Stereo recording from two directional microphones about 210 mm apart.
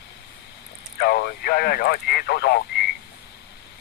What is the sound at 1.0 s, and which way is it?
Speech, 50° left (ahead or behind).